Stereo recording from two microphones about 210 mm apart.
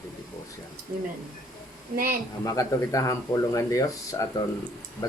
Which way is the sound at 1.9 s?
45° right (ahead or behind).